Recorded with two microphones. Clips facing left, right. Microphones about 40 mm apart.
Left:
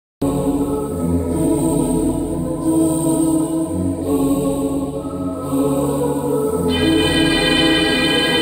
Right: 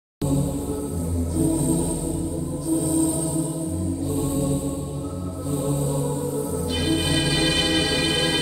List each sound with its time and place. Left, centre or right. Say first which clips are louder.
0.2 s music: left 7 dB; left